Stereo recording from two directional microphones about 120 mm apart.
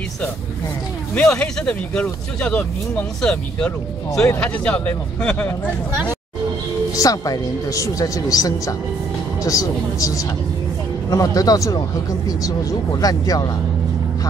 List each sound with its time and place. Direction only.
1.1 s speech: 5° left (ahead or behind)
7.0 s speech: 30° left (ahead or behind)
13.0 s speech: 30° left (ahead or behind)